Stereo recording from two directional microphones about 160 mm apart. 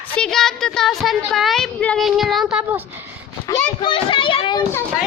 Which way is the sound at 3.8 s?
30° left (ahead or behind).